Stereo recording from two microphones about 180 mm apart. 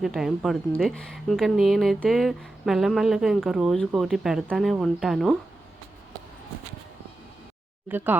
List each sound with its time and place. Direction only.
0.0 s speech: centre (ahead or behind)
7.9 s speech: 10° right (ahead or behind)